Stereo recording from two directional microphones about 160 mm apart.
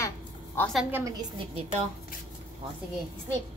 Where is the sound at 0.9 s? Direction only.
15° right (ahead or behind).